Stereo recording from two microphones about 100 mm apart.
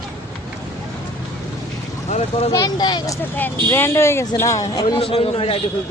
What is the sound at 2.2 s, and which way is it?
Speech, 85° left.